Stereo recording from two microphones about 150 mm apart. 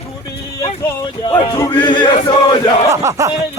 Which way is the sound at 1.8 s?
30° left (ahead or behind).